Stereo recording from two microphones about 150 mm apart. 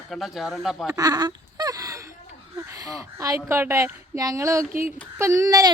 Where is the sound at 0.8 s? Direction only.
25° right (ahead or behind).